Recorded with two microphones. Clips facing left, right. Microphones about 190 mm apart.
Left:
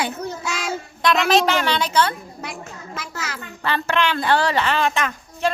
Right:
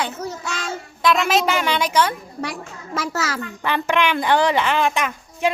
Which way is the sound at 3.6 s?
15° right (ahead or behind).